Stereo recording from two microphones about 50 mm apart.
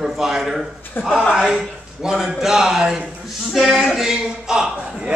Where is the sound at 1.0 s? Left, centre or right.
Left.